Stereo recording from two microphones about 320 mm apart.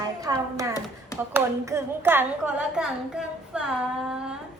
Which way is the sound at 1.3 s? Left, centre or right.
Centre.